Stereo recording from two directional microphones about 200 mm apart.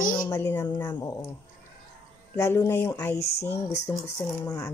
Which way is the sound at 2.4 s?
15° left (ahead or behind).